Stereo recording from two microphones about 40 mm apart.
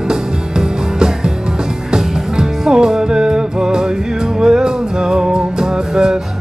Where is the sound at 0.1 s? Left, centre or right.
Centre.